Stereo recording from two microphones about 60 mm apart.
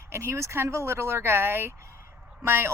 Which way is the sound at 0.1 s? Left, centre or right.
Right.